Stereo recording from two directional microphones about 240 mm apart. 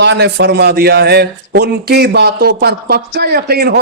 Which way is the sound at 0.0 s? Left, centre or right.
Right.